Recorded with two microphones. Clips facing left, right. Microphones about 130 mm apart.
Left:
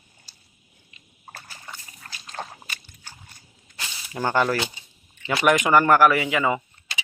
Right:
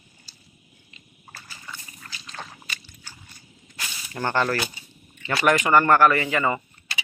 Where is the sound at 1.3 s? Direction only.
50° left (ahead or behind).